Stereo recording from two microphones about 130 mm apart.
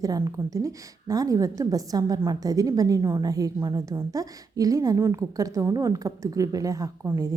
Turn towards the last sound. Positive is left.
turn(degrees=-25)  # may be behind; listen again after turning